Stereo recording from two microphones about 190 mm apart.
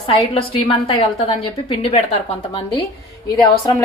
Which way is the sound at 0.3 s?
30° left (ahead or behind).